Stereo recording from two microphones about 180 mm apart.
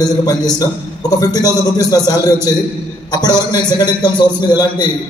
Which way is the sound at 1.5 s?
20° left (ahead or behind).